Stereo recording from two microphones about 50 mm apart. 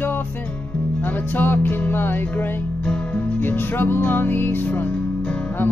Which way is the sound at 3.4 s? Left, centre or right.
Left.